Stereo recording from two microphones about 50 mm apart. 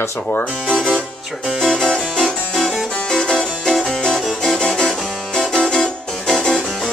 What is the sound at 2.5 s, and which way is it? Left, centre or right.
Harpsichord, centre.